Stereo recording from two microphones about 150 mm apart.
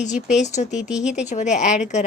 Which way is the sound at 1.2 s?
55° left (ahead or behind).